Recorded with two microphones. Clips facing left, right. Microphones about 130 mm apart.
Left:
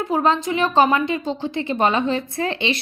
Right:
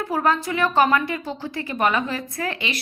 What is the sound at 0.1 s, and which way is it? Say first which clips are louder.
A woman's voice: left 3 dB; 20° left (ahead or behind).